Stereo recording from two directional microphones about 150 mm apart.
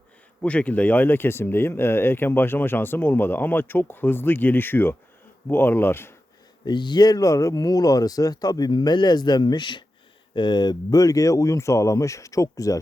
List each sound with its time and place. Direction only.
0.4 s speech: 10° left (ahead or behind)
6.7 s speech: 30° left (ahead or behind)